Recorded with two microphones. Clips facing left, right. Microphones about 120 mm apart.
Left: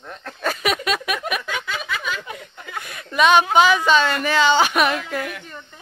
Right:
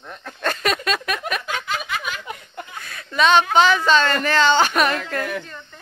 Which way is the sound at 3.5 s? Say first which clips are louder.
Even; 10° left (ahead or behind).